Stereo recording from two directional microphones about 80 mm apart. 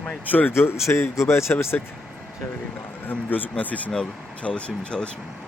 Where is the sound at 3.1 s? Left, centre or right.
Left.